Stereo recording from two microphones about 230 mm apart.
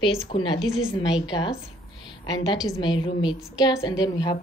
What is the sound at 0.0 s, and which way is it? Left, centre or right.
Speech, left.